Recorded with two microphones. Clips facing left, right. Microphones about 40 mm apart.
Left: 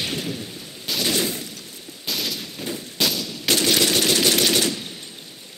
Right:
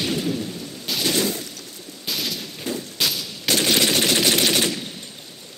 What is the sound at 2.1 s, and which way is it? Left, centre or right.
Gunshot, centre.